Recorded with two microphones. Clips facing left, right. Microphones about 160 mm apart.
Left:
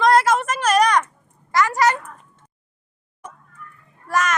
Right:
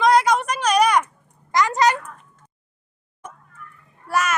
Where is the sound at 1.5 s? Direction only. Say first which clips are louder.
Even; 20° right (ahead or behind).